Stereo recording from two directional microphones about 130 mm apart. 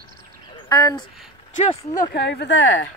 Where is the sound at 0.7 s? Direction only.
30° left (ahead or behind).